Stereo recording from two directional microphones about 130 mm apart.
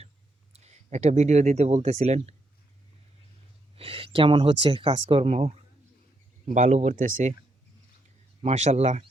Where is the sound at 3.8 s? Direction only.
45° right (ahead or behind); by 7.3 s 80° right.